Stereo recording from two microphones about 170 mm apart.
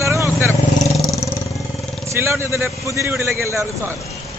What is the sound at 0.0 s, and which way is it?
Vehicle, 15° right (ahead or behind).